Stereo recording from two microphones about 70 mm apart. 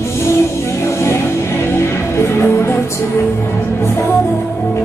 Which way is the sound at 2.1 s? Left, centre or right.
Left.